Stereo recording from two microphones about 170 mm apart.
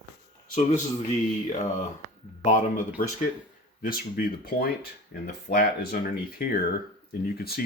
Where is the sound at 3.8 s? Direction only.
60° left (ahead or behind).